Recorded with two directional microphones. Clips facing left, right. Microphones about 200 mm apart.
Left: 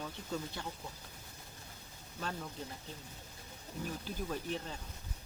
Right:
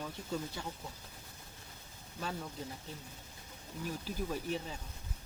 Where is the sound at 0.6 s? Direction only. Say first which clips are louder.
Right 1 dB; 10° right (ahead or behind).